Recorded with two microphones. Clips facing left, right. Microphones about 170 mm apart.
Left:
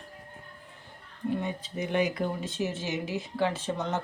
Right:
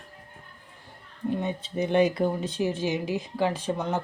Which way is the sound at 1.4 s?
25° right (ahead or behind).